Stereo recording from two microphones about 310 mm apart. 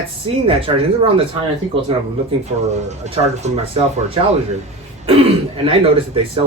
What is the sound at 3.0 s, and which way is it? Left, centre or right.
Speech, centre.